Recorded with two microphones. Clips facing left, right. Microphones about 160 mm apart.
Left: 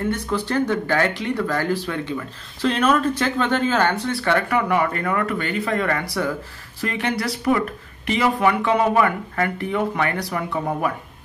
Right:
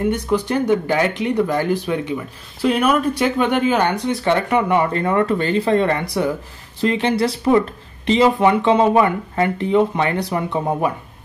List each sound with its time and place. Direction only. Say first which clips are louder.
0.0 s speech: right 5 dB; 15° right (ahead or behind)